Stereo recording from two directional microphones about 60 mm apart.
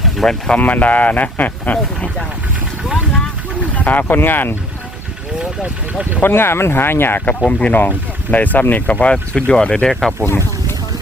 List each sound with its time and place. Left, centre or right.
0.0 s sheep: centre
0.6 s speech: left
3.8 s speech: left
6.2 s speech: left
7.3 s speech: centre
10.2 s boat: left